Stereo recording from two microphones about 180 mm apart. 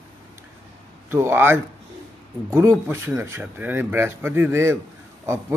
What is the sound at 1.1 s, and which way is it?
A man's voice, 15° right (ahead or behind).